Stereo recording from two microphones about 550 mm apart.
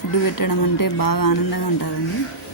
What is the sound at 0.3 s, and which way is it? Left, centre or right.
Speech, left.